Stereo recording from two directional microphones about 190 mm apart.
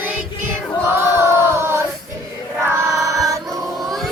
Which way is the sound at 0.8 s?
10° right (ahead or behind).